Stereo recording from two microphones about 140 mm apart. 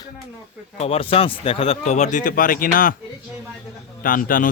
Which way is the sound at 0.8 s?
45° left (ahead or behind).